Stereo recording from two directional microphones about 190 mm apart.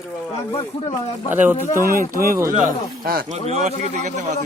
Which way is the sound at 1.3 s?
10° right (ahead or behind).